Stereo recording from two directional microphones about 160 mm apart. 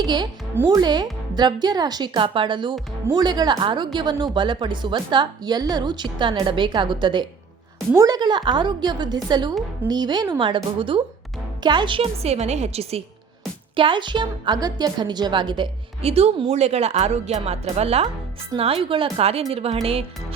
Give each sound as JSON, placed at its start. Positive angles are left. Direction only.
{"t": 0.0, "sound": "a woman's voice", "side_deg": -25}